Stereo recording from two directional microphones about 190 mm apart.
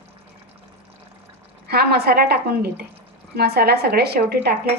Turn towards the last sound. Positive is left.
turn(degrees=-55)  # may be behind; listen again after turning